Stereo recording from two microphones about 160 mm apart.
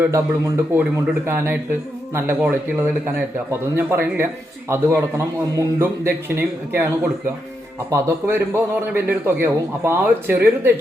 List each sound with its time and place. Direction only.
0.0 s a man's voice: 15° right (ahead or behind)